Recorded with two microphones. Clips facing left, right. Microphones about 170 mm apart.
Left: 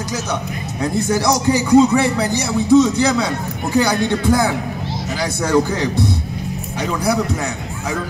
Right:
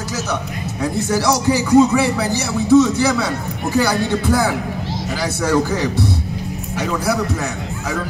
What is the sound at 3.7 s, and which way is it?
Music, 15° left (ahead or behind).